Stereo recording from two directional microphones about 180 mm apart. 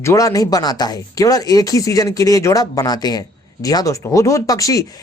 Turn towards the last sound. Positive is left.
turn(degrees=20)  # may be behind; listen again after turning